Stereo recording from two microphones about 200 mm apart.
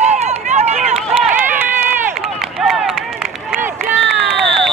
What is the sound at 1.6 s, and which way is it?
Run, 10° right (ahead or behind).